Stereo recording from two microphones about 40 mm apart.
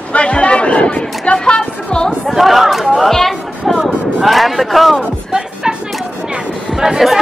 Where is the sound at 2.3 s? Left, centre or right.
Centre.